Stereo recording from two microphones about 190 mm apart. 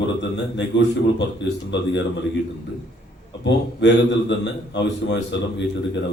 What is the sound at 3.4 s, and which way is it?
A man's voice, 65° left (ahead or behind).